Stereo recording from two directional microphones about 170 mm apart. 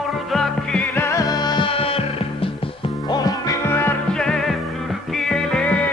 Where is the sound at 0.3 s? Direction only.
5° left (ahead or behind).